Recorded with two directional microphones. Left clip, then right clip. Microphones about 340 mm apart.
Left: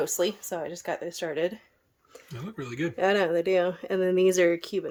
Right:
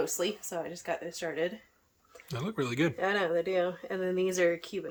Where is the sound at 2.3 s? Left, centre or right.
Centre.